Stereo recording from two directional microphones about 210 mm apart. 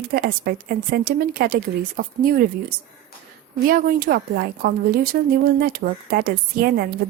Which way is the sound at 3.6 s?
45° right (ahead or behind).